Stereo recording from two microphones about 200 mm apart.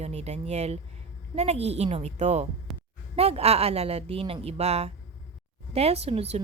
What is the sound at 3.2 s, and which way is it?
A woman's voice, 30° right (ahead or behind).